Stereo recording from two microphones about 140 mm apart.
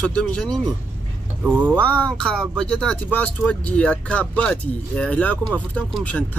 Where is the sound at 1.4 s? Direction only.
10° right (ahead or behind).